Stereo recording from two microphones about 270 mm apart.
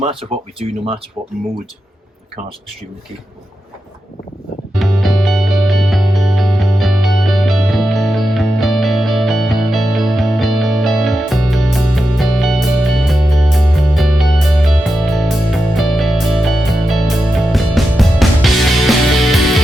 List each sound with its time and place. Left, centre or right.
0.0 s speech: right
4.7 s music: centre